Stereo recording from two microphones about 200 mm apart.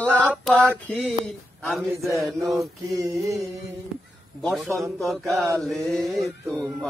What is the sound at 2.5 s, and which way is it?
Music, 15° right (ahead or behind).